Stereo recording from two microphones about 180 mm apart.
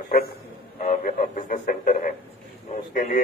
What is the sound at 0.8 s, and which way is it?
A man's voice, 45° left (ahead or behind).